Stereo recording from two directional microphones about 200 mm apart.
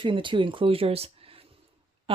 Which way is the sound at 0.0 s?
25° right (ahead or behind).